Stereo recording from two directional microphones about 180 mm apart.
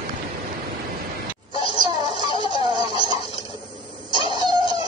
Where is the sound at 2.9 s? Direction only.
25° right (ahead or behind).